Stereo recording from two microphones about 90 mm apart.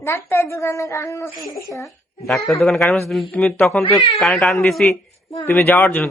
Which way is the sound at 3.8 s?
70° left (ahead or behind).